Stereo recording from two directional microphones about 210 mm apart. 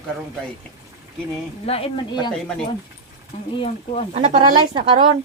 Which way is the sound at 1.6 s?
30° left (ahead or behind).